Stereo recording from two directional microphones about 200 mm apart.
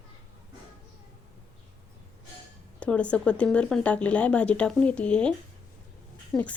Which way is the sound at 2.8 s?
5° left (ahead or behind).